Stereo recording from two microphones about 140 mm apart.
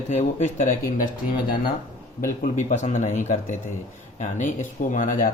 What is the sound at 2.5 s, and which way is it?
Speech, 60° left (ahead or behind).